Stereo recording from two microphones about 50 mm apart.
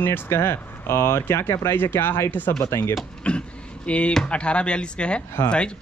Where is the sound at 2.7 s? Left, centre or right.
Left.